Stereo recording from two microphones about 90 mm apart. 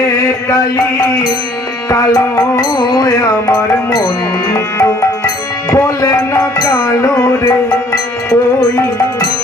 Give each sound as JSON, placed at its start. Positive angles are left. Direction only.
{"t": 1.9, "sound": "music", "side_deg": 40}
{"t": 5.7, "sound": "music", "side_deg": 35}
{"t": 6.6, "sound": "music", "side_deg": 50}
{"t": 7.0, "sound": "music", "side_deg": 30}